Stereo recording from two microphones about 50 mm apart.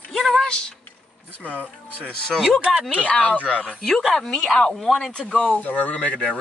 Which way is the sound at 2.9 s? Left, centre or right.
Left.